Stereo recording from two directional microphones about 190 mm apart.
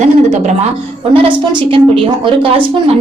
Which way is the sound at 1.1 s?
30° right (ahead or behind).